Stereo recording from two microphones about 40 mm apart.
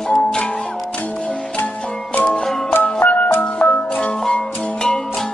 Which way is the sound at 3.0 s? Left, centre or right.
Left.